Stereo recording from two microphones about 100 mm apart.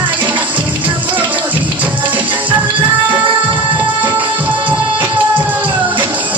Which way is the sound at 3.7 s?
20° right (ahead or behind).